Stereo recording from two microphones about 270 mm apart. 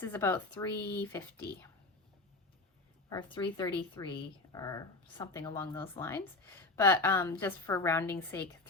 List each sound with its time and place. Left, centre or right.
0.0 s speech: centre
3.1 s speech: centre